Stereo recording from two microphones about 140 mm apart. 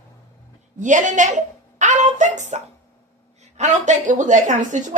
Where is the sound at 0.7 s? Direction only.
60° right (ahead or behind).